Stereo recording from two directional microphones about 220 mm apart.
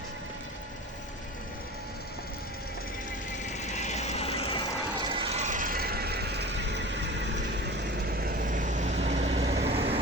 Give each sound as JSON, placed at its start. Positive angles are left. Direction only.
{"t": 3.5, "sound": "vehicle", "side_deg": 30}
{"t": 5.0, "sound": "vehicle", "side_deg": -25}
{"t": 9.5, "sound": "vehicle", "side_deg": -50}
{"t": 9.7, "sound": "vehicle", "side_deg": -25}